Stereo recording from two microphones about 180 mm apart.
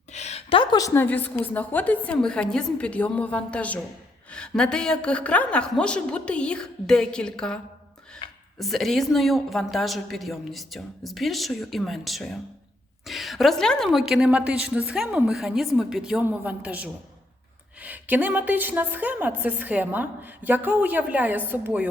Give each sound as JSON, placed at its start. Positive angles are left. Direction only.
{"t": 0.1, "sound": "a woman's voice", "side_deg": 40}
{"t": 8.2, "sound": "a sound", "side_deg": 25}
{"t": 8.5, "sound": "a woman's voice", "side_deg": 0}